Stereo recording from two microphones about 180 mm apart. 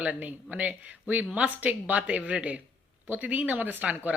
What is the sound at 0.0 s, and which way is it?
Speech, 10° right (ahead or behind).